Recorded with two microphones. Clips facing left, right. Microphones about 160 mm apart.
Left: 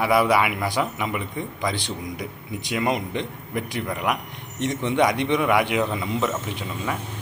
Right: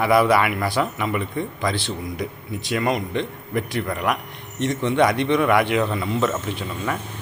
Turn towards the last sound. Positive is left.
turn(degrees=10)  # may be behind; listen again after turning